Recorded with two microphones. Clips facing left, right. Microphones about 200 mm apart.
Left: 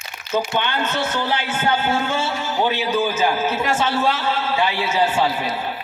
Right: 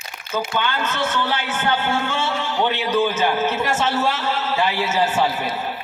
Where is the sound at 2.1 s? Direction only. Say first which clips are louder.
Left 1 dB; 5° left (ahead or behind).